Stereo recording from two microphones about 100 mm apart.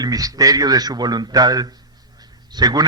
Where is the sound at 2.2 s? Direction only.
40° right (ahead or behind).